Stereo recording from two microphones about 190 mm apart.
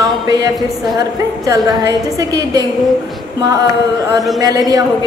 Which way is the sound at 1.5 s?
15° right (ahead or behind).